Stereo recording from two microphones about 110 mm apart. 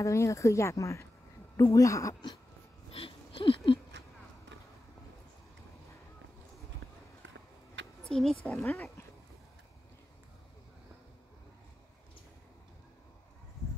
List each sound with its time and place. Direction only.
0.0 s speech: 25° left (ahead or behind)
2.9 s a sound: 55° left (ahead or behind)
8.1 s a woman's voice: 5° left (ahead or behind)
8.5 s speech: 20° left (ahead or behind)